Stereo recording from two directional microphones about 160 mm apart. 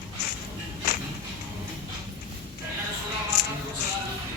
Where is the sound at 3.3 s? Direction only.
90° left.